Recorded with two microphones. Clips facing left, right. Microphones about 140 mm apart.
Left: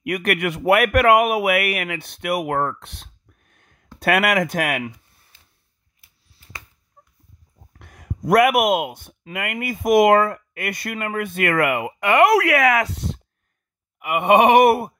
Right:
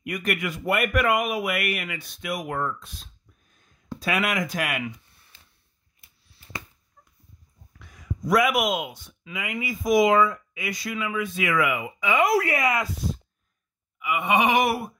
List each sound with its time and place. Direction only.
0.0 s speech: 65° left (ahead or behind)
7.8 s speech: 60° left (ahead or behind)
13.9 s speech: 60° left (ahead or behind)